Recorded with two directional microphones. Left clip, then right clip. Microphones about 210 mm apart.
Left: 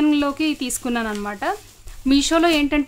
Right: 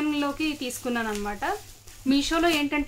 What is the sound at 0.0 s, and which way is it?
A woman's voice, 50° left (ahead or behind).